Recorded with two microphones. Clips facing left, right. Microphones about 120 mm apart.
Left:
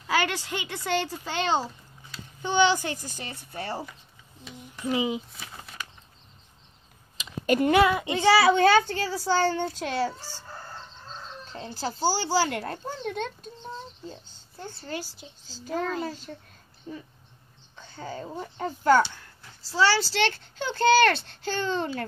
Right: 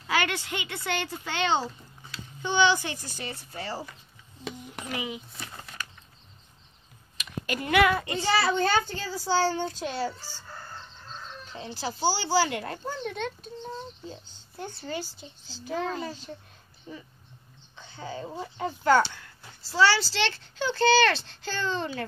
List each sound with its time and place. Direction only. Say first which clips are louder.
0.1 s a child's voice: left 1 dB; 40° left (ahead or behind)
4.8 s speech: left 8 dB; 25° left (ahead or behind)
5.4 s a sound: even; 5° left (ahead or behind)
7.4 s speech: left 11 dB; 45° left (ahead or behind)
7.9 s speech: left 2 dB; 20° left (ahead or behind)
8.2 s a child's voice: left 8 dB; 85° left
11.5 s speech: left 1 dB; 45° left (ahead or behind)
14.8 s speech: even; 5° left (ahead or behind)
17.7 s a sound: even; 45° left (ahead or behind)
18.6 s speech: left 1 dB; 40° left (ahead or behind)
20.1 s a child's voice: left 3 dB; 50° left (ahead or behind)